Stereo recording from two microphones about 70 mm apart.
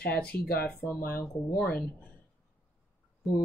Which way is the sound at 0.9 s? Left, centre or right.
Left.